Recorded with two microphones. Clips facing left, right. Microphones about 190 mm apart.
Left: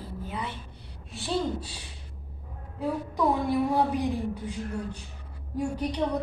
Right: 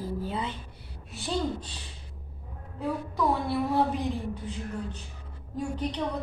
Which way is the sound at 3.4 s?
10° left (ahead or behind).